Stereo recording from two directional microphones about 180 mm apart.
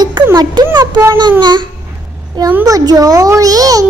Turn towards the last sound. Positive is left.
turn(degrees=-20)  # may be behind; listen again after turning